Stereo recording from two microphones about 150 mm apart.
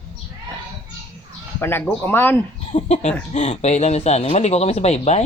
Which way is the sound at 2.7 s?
50° left (ahead or behind).